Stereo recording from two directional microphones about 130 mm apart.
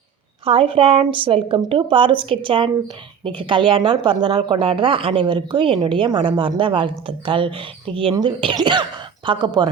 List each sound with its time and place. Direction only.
0.4 s speech: 45° right (ahead or behind)